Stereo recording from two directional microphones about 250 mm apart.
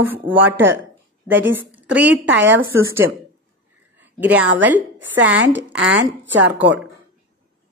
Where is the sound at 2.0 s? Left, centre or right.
Right.